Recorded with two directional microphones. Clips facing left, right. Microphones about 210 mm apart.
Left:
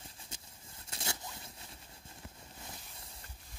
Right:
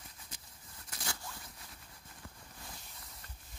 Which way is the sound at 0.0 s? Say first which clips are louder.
Left 2 dB; 25° left (ahead or behind).